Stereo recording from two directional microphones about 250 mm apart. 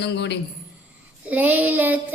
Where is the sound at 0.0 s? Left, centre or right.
Left.